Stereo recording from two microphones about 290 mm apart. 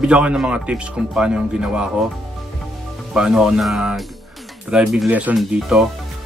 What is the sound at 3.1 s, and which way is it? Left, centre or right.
Speech, centre.